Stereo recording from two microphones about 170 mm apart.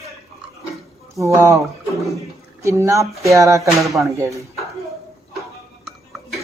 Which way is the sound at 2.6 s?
15° right (ahead or behind).